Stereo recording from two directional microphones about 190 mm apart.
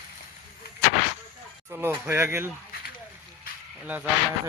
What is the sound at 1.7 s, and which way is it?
Speech, 10° right (ahead or behind).